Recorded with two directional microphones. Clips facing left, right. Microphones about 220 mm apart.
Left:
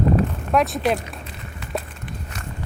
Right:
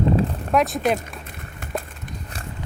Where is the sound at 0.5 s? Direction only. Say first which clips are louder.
Even; centre (ahead or behind).